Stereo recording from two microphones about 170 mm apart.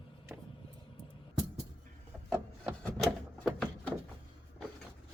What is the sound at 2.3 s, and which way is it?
Wood, 5° left (ahead or behind).